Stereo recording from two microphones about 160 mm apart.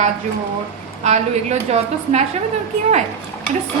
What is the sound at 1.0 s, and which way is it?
A woman's voice, 45° right (ahead or behind).